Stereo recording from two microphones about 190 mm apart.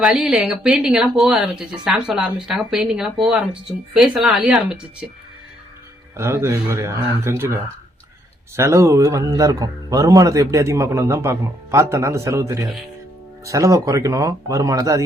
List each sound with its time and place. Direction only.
0.0 s speech: 5° right (ahead or behind)
6.1 s a man's voice: 15° right (ahead or behind)